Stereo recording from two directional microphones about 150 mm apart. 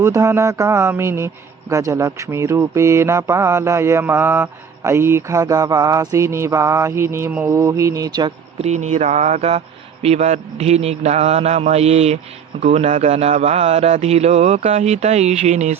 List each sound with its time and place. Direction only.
0.0 s a sound: 15° right (ahead or behind)
1.7 s mantra: 20° right (ahead or behind)
8.6 s speech: 50° right (ahead or behind)